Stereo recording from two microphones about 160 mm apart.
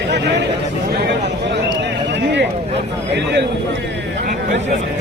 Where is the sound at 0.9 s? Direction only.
90° right.